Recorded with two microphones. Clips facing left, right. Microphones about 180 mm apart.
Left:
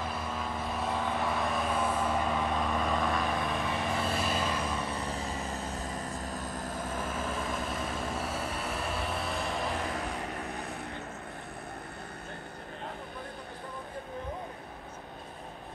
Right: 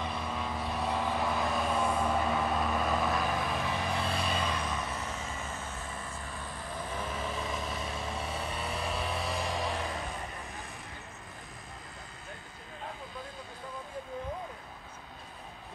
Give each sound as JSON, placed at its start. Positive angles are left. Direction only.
{"t": 0.0, "sound": "vehicle", "side_deg": 0}
{"t": 4.6, "sound": "vehicle", "side_deg": 35}
{"t": 8.2, "sound": "vehicle", "side_deg": 5}
{"t": 10.1, "sound": "vehicle", "side_deg": 65}